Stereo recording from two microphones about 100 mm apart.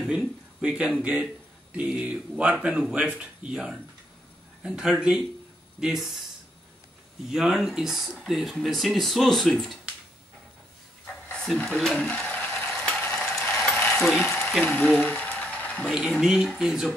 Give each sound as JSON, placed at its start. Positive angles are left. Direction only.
{"t": 0.0, "sound": "speech", "side_deg": -5}
{"t": 7.2, "sound": "speech", "side_deg": -5}
{"t": 11.4, "sound": "speech", "side_deg": 5}
{"t": 12.0, "sound": "speech", "side_deg": 15}
{"t": 12.5, "sound": "mechanisms", "side_deg": 5}
{"t": 13.7, "sound": "coin", "side_deg": 15}
{"t": 13.9, "sound": "speech", "side_deg": 0}
{"t": 14.2, "sound": "a sound", "side_deg": 20}
{"t": 14.7, "sound": "a sound", "side_deg": 10}
{"t": 15.9, "sound": "speech", "side_deg": -10}